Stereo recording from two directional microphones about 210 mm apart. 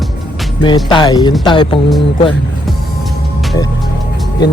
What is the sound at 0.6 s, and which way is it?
Speech, 20° left (ahead or behind).